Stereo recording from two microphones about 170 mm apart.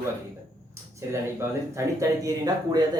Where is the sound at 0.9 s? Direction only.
15° right (ahead or behind).